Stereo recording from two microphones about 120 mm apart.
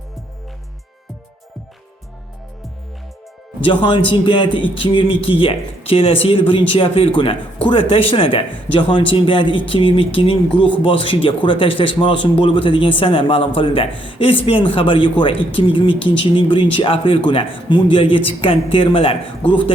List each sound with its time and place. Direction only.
3.6 s speech: 40° left (ahead or behind)